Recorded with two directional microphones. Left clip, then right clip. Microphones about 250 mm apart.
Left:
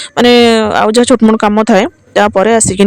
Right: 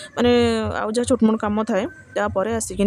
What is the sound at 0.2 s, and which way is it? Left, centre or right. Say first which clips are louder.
Speech: left 11 dB; left.